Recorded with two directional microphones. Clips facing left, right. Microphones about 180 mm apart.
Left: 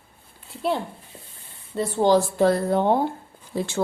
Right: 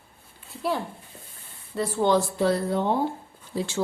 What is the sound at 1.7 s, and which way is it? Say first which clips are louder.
Speech: left 2 dB; 25° left (ahead or behind).